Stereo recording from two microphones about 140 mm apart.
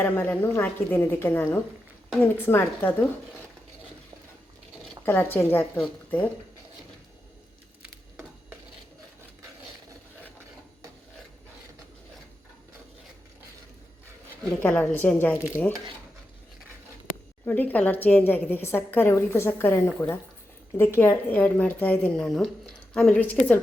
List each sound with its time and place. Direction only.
0.0 s a woman's voice: 15° left (ahead or behind)
5.0 s a woman's voice: 15° left (ahead or behind)
7.8 s a sound: 10° right (ahead or behind)
14.6 s a woman's voice: 10° left (ahead or behind)
17.4 s a woman's voice: 15° left (ahead or behind)